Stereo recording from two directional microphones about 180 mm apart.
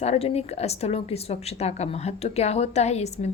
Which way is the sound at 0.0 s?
35° left (ahead or behind).